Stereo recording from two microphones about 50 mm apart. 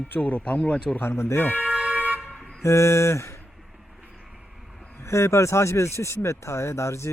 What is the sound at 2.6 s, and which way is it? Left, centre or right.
Speech, left.